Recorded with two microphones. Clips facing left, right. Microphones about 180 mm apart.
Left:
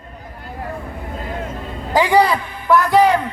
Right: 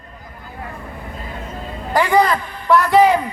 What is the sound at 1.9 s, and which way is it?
A man's voice, 10° left (ahead or behind).